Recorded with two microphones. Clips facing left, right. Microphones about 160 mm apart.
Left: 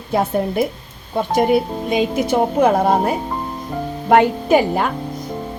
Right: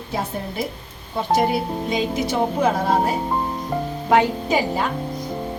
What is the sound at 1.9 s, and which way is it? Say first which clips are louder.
Speech: left 6 dB; 55° left (ahead or behind).